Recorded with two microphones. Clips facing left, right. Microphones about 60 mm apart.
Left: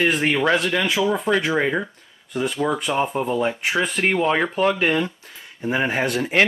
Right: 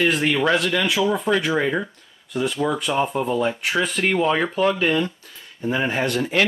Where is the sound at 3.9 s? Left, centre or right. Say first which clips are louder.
Even; left.